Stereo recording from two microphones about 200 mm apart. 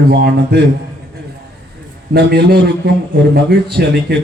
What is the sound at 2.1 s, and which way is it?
A man's voice, 50° right (ahead or behind).